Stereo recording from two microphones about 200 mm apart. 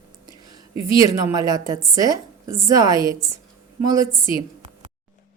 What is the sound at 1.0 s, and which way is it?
Speech, 15° right (ahead or behind).